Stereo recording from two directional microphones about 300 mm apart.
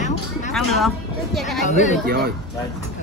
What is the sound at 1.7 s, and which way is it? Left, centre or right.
Speech, left.